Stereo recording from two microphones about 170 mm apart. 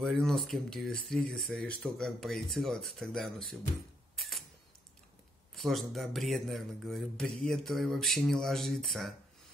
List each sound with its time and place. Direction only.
0.0 s a man's voice: centre (ahead or behind)
4.2 s camera: centre (ahead or behind)
5.5 s a man's voice: centre (ahead or behind)